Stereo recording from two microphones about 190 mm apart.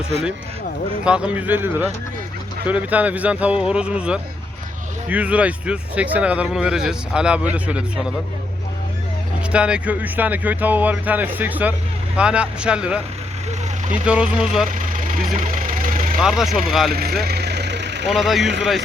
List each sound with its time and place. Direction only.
1.0 s speech: 5° right (ahead or behind)
9.5 s speech: 5° right (ahead or behind)
15.5 s vehicle: 45° right (ahead or behind)
16.2 s speech: centre (ahead or behind)
16.9 s speech: 55° right (ahead or behind)
17.2 s vehicle: 60° right (ahead or behind)
18.1 s speech: centre (ahead or behind)